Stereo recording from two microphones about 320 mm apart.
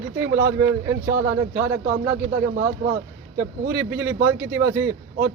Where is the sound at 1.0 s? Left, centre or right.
Right.